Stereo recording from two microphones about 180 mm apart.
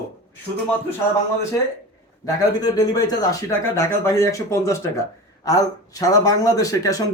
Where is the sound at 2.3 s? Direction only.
20° left (ahead or behind).